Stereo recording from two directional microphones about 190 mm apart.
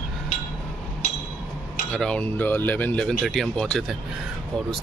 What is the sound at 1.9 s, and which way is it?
Speech, 5° left (ahead or behind).